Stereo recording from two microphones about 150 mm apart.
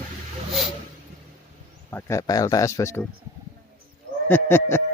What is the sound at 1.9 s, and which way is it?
Speech, 20° left (ahead or behind).